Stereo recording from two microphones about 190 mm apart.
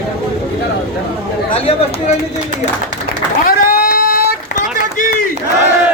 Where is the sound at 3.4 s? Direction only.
45° left (ahead or behind).